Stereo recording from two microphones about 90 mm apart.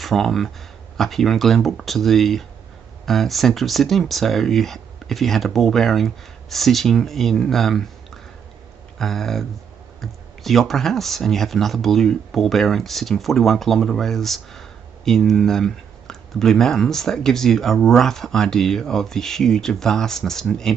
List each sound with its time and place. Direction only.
0.0 s speech: centre (ahead or behind)